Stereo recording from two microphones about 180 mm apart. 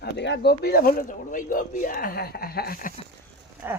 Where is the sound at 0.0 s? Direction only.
70° left (ahead or behind); by 2.9 s 55° left (ahead or behind).